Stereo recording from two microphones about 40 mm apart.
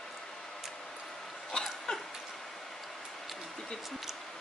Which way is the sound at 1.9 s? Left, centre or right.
Left.